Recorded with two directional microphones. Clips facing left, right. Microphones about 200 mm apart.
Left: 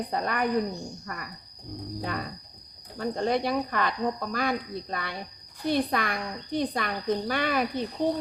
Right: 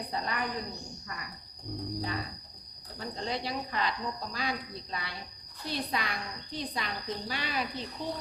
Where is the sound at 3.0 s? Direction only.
55° left (ahead or behind).